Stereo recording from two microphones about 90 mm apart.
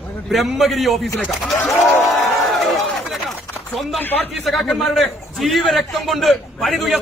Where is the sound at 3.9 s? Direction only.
20° left (ahead or behind).